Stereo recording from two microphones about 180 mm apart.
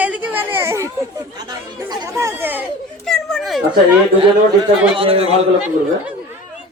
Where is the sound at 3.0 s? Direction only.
Centre (ahead or behind).